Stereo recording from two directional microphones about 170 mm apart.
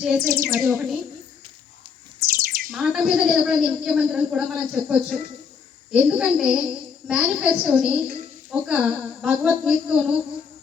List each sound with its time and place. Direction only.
0.0 s a woman's voice: 5° right (ahead or behind)
0.4 s a sound: 15° right (ahead or behind)
2.2 s bird: 60° right (ahead or behind)
2.7 s a woman's voice: 5° right (ahead or behind)